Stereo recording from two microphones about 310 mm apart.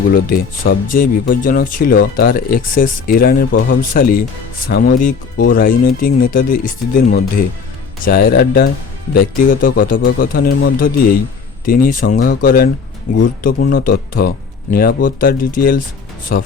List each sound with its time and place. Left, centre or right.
0.1 s speech: left